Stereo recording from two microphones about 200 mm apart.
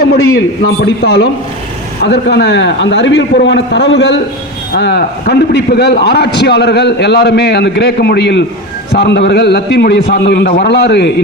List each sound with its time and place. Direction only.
0.0 s a man's voice: 55° left (ahead or behind)